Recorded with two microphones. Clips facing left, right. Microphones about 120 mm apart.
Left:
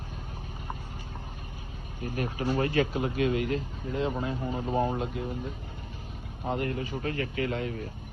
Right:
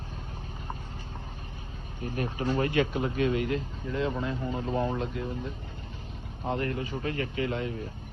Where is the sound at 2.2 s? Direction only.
20° right (ahead or behind).